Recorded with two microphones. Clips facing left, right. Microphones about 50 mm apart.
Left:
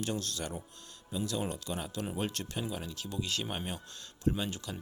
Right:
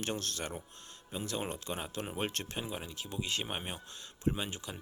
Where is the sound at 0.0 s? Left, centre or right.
Right.